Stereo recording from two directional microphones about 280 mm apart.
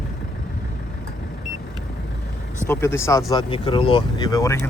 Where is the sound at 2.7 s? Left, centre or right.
Centre.